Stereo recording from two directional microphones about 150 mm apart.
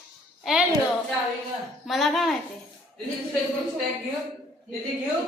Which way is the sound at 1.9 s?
Centre (ahead or behind).